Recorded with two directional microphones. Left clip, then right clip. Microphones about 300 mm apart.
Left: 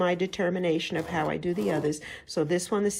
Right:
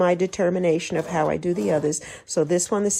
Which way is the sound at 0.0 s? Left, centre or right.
Centre.